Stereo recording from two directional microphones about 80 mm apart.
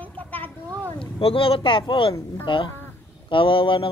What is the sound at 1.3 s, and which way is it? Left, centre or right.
Speech, left.